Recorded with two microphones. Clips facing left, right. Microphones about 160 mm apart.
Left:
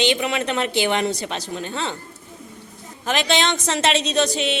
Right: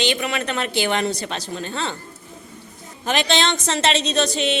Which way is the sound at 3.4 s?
15° left (ahead or behind).